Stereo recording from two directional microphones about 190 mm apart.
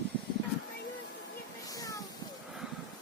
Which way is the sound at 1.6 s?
20° left (ahead or behind).